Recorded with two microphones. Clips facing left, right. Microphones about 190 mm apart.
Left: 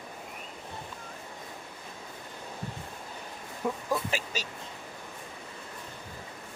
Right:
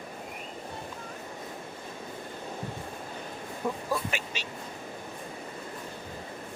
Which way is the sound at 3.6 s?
5° left (ahead or behind).